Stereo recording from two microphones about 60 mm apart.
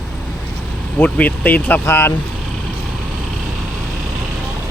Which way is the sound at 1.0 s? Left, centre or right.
Left.